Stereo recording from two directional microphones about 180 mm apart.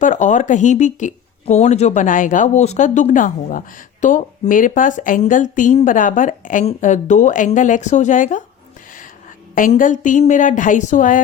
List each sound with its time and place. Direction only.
0.0 s speech: 45° left (ahead or behind)
9.6 s speech: 50° left (ahead or behind)